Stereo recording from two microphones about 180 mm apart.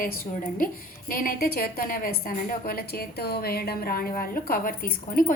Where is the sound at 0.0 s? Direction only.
50° left (ahead or behind).